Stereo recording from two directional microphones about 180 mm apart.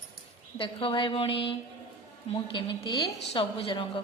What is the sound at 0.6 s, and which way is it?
A woman's voice, 30° left (ahead or behind).